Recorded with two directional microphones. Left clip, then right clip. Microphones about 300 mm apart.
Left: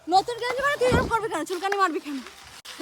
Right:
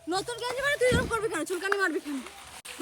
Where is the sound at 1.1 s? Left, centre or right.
Left.